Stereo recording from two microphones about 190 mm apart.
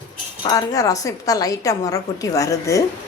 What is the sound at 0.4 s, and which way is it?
A woman's voice, 20° left (ahead or behind).